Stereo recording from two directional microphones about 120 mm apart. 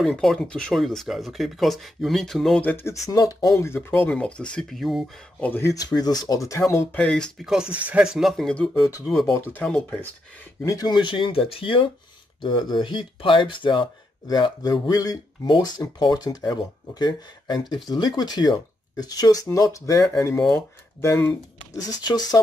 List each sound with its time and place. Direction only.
0.0 s speech: 5° left (ahead or behind)
2.6 s speech: 20° left (ahead or behind); by 5.1 s centre (ahead or behind)
5.4 s speech: 20° left (ahead or behind)
5.9 s speech: 35° left (ahead or behind)
7.0 s speech: 10° left (ahead or behind)
7.4 s speech: 5° right (ahead or behind)
8.8 s speech: 25° left (ahead or behind)
9.5 s speech: 10° left (ahead or behind)
10.6 s speech: 30° left (ahead or behind)
21.7 s speech: 35° left (ahead or behind)